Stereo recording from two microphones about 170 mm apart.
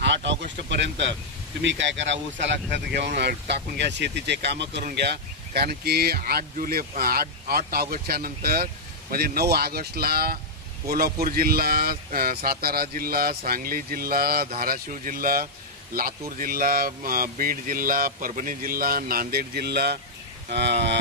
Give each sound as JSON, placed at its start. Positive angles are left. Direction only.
{"t": 0.0, "sound": "speech", "side_deg": -90}
{"t": 4.8, "sound": "speech", "side_deg": -75}